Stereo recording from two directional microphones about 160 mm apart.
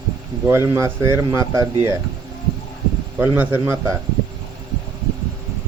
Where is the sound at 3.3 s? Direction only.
15° right (ahead or behind).